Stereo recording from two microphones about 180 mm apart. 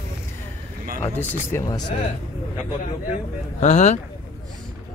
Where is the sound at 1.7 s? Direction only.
20° left (ahead or behind).